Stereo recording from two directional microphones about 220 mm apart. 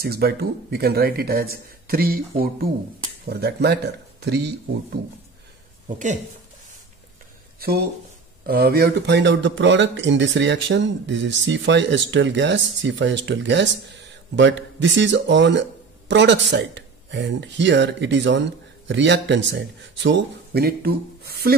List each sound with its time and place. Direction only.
0.0 s speech: 45° right (ahead or behind)
8.5 s a man's voice: 45° right (ahead or behind)